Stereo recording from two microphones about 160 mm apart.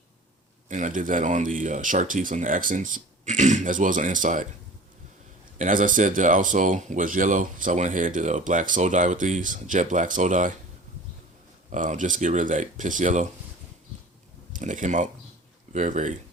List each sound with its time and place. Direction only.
0.7 s speech: 50° right (ahead or behind)
5.5 s speech: 55° right (ahead or behind)
11.7 s speech: 55° right (ahead or behind)
14.5 s speech: 50° right (ahead or behind)